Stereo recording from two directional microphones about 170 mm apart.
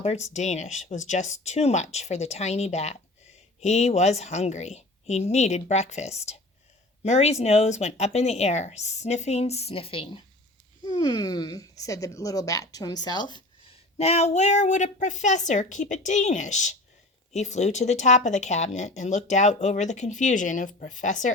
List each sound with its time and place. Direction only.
0.0 s speech: 40° left (ahead or behind)
14.0 s speech: 40° left (ahead or behind)